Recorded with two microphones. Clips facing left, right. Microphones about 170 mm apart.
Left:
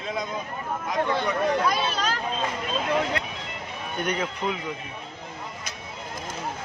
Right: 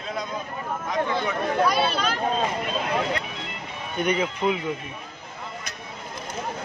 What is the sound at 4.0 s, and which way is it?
Speech, 5° right (ahead or behind).